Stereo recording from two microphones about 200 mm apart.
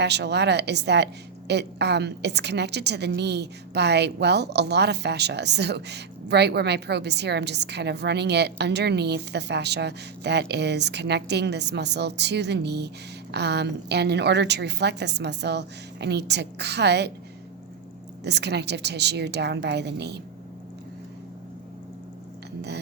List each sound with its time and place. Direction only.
0.0 s a woman's voice: 55° right (ahead or behind)
18.2 s a woman's voice: 60° right (ahead or behind)